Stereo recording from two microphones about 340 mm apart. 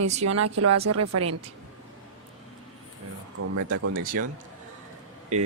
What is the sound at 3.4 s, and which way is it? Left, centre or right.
Speech, right.